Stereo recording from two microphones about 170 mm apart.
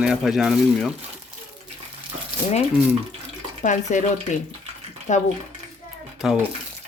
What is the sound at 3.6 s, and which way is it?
Speech, 45° left (ahead or behind).